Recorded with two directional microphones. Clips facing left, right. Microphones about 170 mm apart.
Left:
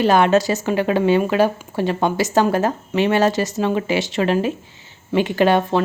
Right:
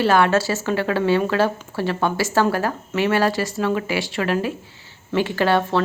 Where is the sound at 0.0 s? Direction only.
20° left (ahead or behind).